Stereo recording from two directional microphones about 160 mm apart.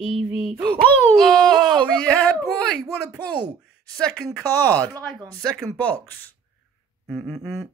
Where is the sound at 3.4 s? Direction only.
25° right (ahead or behind).